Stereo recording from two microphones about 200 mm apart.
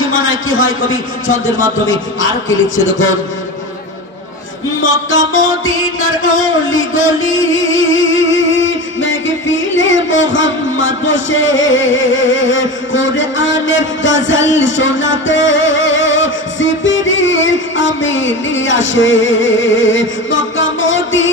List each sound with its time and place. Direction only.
0.1 s a man's voice: 85° left
4.8 s music: 75° left (ahead or behind)
5.9 s a sound: 90° left; by 21.3 s 70° left (ahead or behind)